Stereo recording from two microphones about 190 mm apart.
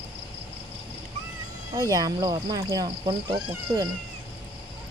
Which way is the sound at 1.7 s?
20° right (ahead or behind).